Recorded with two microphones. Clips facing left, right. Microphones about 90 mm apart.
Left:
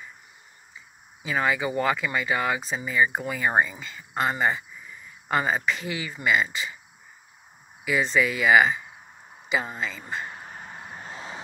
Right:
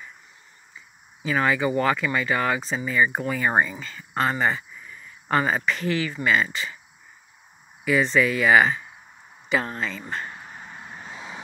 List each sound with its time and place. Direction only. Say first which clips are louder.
1.2 s speech: right 3 dB; 5° left (ahead or behind)
7.8 s speech: right 3 dB; 5° left (ahead or behind)
10.4 s a sound: even; 15° left (ahead or behind); by 11.4 s centre (ahead or behind)